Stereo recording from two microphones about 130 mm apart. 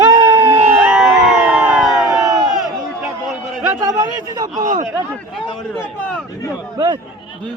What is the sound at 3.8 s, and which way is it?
Speech, 25° right (ahead or behind).